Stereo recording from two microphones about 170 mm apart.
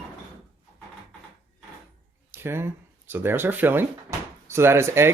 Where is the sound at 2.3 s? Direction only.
15° right (ahead or behind).